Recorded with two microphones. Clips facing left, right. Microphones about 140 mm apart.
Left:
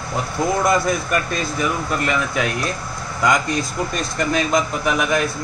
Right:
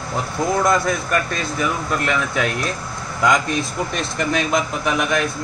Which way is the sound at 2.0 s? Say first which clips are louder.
Even; 5° left (ahead or behind).